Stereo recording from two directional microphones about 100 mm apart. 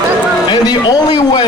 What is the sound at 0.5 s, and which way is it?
Speech, 45° left (ahead or behind).